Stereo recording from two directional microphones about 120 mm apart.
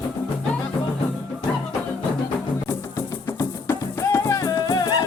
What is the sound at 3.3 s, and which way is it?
Music, 20° left (ahead or behind).